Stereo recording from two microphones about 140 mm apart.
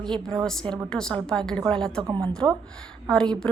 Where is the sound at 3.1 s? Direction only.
5° left (ahead or behind).